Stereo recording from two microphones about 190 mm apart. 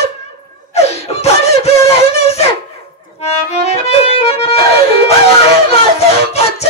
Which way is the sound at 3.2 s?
35° left (ahead or behind).